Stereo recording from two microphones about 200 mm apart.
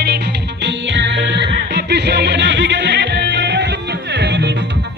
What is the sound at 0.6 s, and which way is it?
Music, 65° right (ahead or behind).